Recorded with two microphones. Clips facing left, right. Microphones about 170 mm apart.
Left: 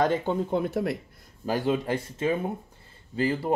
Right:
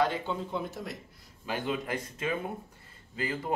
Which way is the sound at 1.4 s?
35° left (ahead or behind).